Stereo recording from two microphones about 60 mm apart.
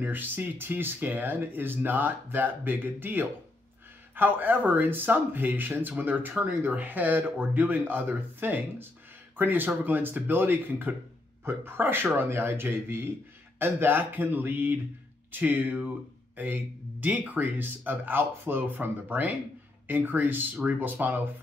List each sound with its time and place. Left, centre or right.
0.0 s speech: right